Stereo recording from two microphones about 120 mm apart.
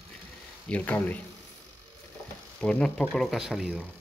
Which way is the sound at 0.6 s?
10° left (ahead or behind).